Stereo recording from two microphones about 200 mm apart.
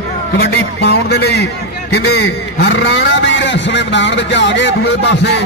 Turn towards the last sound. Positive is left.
turn(degrees=60)  # may be behind; listen again after turning